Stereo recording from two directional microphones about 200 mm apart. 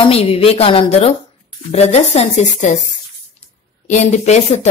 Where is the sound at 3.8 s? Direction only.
35° left (ahead or behind).